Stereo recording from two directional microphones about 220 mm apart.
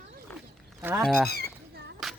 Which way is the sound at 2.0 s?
Centre (ahead or behind).